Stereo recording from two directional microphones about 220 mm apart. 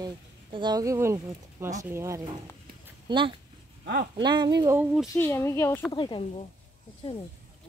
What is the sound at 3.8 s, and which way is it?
Speech, 45° right (ahead or behind).